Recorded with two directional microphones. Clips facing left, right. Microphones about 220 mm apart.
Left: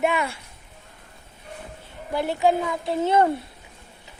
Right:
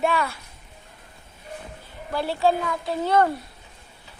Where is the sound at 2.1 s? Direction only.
20° left (ahead or behind).